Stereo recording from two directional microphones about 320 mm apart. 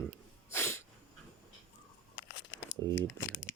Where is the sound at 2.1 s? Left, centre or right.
Left.